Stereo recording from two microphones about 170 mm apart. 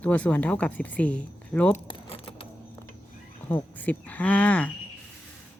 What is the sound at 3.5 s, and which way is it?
Speech, 10° left (ahead or behind).